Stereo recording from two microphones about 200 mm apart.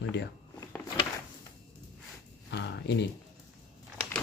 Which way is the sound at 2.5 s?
60° left (ahead or behind).